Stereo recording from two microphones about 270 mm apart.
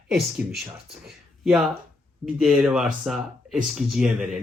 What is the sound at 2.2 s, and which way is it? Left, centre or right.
Speech, centre.